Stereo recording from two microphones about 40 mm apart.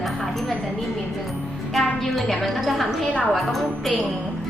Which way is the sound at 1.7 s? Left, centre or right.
Centre.